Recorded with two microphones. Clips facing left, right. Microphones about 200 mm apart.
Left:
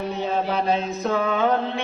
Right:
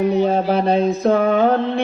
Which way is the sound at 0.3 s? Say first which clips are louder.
Right 6 dB; 35° right (ahead or behind).